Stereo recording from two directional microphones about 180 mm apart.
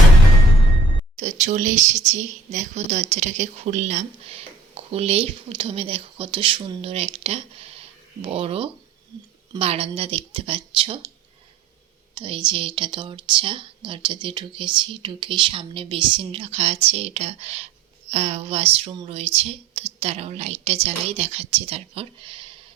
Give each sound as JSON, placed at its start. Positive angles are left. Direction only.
{"t": 1.1, "sound": "a woman's voice", "side_deg": -40}
{"t": 12.1, "sound": "a woman's voice", "side_deg": -30}